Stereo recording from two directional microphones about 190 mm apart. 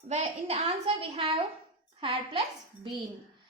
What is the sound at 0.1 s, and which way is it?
A woman's voice, 35° right (ahead or behind).